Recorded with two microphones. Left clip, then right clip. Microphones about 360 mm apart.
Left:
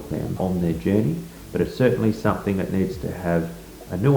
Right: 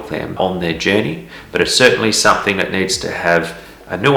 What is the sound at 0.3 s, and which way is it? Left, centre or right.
Speech, right.